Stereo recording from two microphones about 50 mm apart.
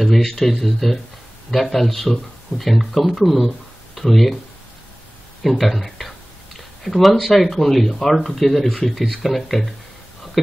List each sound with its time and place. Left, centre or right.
0.0 s speech: centre
5.4 s speech: centre